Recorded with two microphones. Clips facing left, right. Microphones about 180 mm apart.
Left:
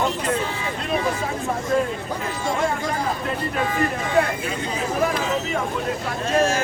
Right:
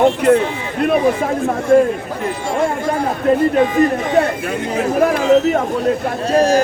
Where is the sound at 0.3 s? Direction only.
60° right (ahead or behind).